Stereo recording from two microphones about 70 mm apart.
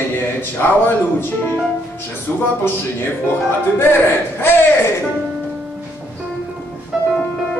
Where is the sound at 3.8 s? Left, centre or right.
Left.